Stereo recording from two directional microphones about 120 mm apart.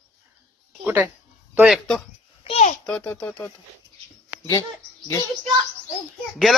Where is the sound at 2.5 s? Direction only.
60° left (ahead or behind).